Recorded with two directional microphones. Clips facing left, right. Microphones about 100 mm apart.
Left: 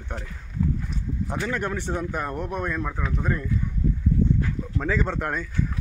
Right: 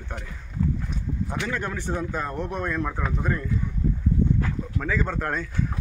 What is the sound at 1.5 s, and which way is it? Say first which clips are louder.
Speech: left 1 dB; 20° left (ahead or behind).